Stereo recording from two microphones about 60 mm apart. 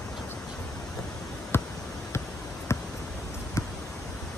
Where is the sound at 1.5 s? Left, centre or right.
Left.